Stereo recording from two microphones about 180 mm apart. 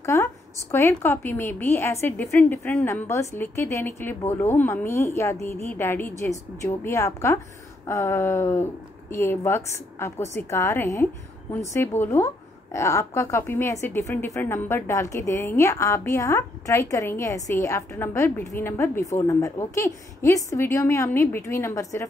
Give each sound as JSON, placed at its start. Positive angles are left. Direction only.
{"t": 0.0, "sound": "a woman's voice", "side_deg": 15}